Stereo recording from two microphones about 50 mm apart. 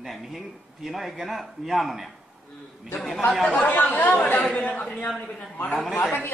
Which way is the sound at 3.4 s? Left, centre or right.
Left.